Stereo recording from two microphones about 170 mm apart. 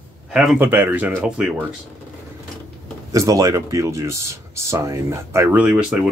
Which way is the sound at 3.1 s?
20° right (ahead or behind).